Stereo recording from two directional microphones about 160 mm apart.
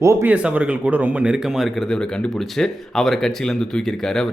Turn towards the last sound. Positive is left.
turn(degrees=5)  # may be behind; listen again after turning